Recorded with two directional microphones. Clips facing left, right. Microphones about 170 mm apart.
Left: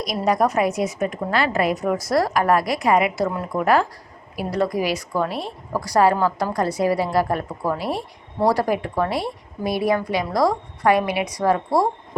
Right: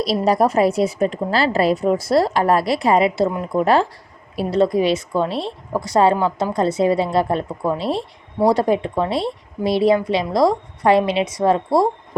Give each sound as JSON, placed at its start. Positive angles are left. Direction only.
{"t": 0.3, "sound": "a woman's voice", "side_deg": -30}